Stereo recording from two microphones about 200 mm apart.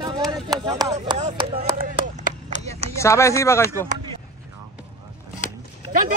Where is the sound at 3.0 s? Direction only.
15° left (ahead or behind).